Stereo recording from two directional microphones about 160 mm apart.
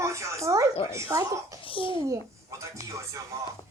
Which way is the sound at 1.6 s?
35° left (ahead or behind).